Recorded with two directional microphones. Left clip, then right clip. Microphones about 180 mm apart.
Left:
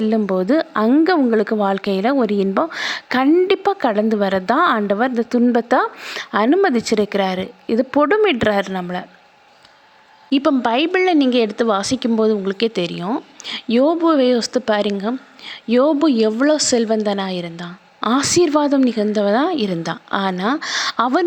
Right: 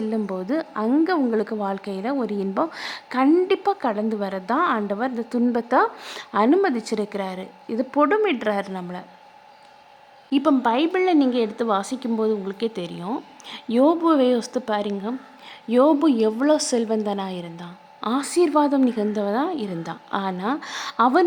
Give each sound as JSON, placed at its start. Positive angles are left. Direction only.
{"t": 0.0, "sound": "a woman's voice", "side_deg": 20}
{"t": 10.2, "sound": "a woman's voice", "side_deg": 20}